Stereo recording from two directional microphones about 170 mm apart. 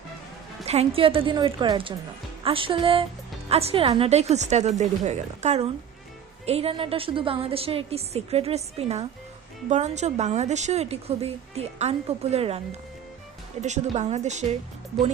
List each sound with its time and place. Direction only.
0.6 s a woman's voice: 40° right (ahead or behind)